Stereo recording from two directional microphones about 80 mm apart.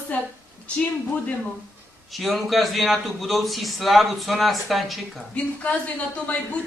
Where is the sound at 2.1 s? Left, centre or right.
Centre.